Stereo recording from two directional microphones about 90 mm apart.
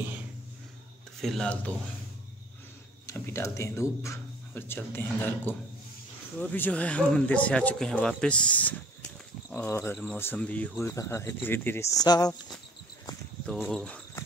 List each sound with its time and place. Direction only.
1.2 s cricket: 5° left (ahead or behind)
3.1 s speech: 30° left (ahead or behind)
9.7 s speech: 25° left (ahead or behind)
10.8 s speech: 30° left (ahead or behind)
11.9 s speech: 45° left (ahead or behind)
13.5 s cricket: 5° left (ahead or behind)